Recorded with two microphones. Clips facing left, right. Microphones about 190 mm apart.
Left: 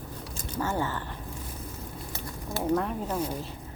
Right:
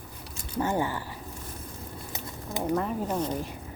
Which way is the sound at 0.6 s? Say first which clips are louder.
Right 2 dB; 15° right (ahead or behind).